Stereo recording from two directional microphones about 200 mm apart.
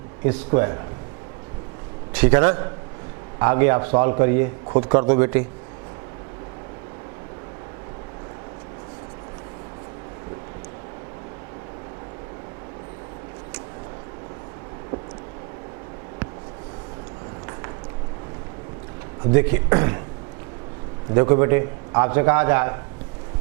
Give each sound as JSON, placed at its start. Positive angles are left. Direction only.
{"t": 0.3, "sound": "a man's voice", "side_deg": -15}
{"t": 2.1, "sound": "a man's voice", "side_deg": -10}
{"t": 19.2, "sound": "speech", "side_deg": -15}
{"t": 21.1, "sound": "a man's voice", "side_deg": -20}